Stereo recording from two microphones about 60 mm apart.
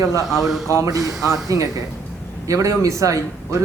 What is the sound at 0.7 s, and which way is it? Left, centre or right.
A man's voice, right.